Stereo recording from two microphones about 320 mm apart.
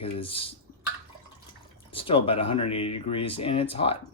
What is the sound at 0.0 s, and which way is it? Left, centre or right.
Speech, centre.